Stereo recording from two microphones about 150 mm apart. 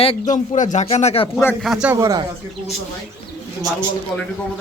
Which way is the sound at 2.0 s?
25° right (ahead or behind).